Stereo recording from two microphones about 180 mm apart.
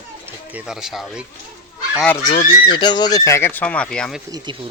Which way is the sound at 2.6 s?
25° left (ahead or behind).